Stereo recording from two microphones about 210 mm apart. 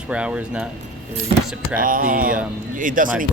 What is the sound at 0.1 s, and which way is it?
Speech, 5° right (ahead or behind).